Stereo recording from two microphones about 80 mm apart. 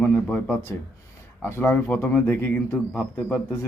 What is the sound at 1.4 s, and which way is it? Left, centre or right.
Speech, left.